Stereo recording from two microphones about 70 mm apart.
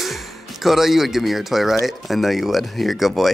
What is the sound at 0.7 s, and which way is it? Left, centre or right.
Speech, centre.